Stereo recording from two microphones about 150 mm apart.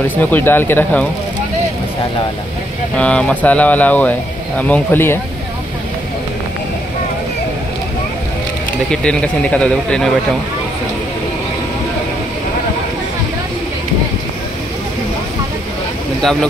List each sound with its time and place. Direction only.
0.2 s speech: 15° left (ahead or behind)
3.0 s speech: 10° left (ahead or behind)
8.9 s speech: 5° left (ahead or behind)
16.2 s speech: 5° left (ahead or behind)